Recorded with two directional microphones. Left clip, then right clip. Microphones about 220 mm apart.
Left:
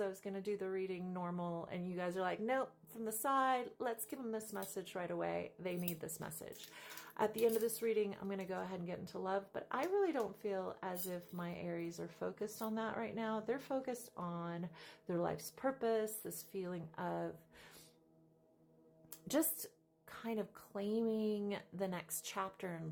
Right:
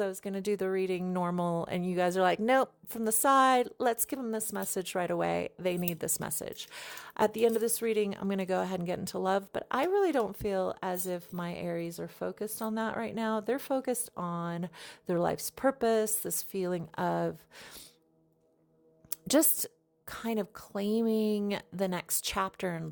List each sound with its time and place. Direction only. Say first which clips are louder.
0.0 s speech: right 8 dB; 45° right (ahead or behind)
19.1 s speech: right 11 dB; 45° right (ahead or behind)